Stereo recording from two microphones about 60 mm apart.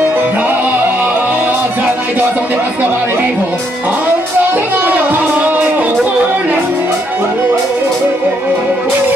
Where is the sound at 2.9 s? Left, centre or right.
Right.